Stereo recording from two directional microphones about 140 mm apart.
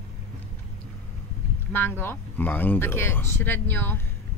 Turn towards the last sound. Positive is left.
turn(degrees=15)  # may be behind; listen again after turning